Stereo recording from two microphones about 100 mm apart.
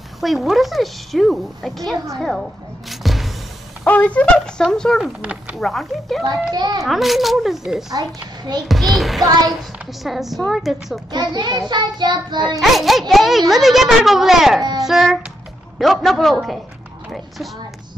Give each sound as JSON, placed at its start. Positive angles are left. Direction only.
{"t": 0.2, "sound": "a child's voice", "side_deg": 0}
{"t": 2.9, "sound": "music", "side_deg": 0}
{"t": 3.8, "sound": "speech", "side_deg": 15}
{"t": 5.2, "sound": "speech", "side_deg": -15}
{"t": 5.6, "sound": "a child's voice", "side_deg": 0}
{"t": 6.5, "sound": "child singing", "side_deg": -45}
{"t": 6.8, "sound": "a child's voice", "side_deg": 0}
{"t": 7.9, "sound": "a woman's voice", "side_deg": -40}
{"t": 8.6, "sound": "a child's voice", "side_deg": 0}
{"t": 11.1, "sound": "child singing", "side_deg": -45}
{"t": 12.5, "sound": "a child's voice", "side_deg": 0}